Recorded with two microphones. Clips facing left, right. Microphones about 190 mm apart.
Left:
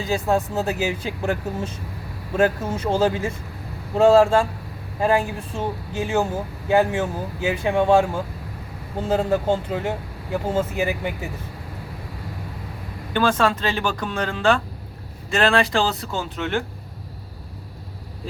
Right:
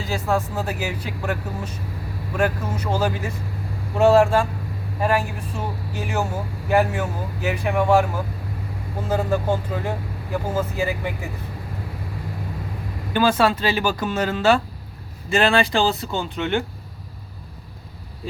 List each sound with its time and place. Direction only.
0.0 s speech: 20° left (ahead or behind)
13.1 s speech: 10° right (ahead or behind)